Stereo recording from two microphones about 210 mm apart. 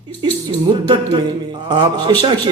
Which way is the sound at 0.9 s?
20° right (ahead or behind).